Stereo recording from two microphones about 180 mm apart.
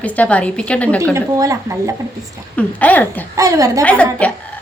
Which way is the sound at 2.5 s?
10° left (ahead or behind).